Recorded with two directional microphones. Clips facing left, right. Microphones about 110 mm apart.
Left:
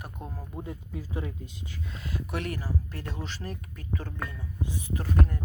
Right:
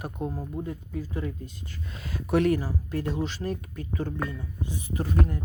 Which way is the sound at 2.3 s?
25° right (ahead or behind).